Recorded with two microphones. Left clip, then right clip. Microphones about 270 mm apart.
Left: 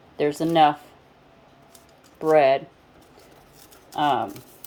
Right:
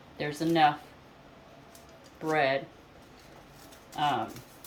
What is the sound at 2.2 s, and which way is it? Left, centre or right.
Speech, left.